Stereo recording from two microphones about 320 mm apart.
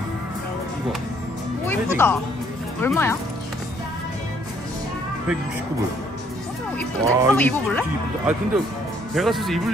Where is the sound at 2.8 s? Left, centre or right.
Centre.